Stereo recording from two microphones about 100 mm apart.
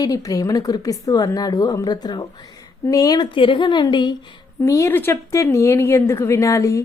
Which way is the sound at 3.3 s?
60° left (ahead or behind).